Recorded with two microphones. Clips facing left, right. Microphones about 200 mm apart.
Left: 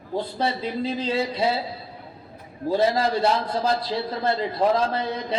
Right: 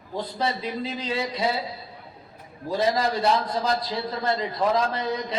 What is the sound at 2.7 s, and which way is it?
A man's voice, 30° left (ahead or behind).